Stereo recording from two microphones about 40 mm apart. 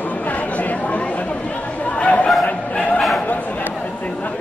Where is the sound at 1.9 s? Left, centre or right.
Left.